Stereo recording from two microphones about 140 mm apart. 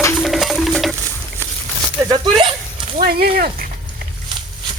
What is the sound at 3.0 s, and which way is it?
Speech, 90° right.